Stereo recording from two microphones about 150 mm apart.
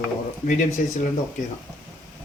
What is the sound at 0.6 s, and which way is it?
Speech, 55° left (ahead or behind).